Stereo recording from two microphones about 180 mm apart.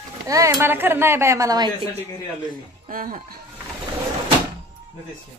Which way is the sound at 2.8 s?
50° right (ahead or behind).